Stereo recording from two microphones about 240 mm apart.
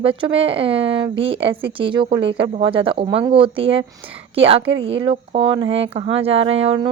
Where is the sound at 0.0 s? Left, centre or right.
Right.